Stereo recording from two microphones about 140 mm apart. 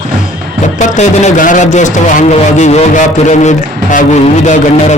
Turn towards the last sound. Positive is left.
turn(degrees=60)  # may be behind; listen again after turning